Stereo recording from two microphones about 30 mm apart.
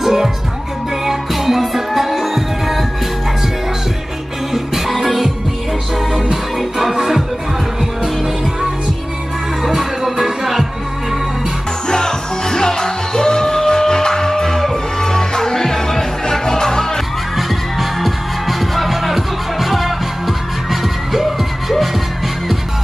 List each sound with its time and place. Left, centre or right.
0.0 s music: centre
4.7 s music: centre
6.8 s music: centre
9.7 s music: centre
11.9 s music: left
17.4 s music: centre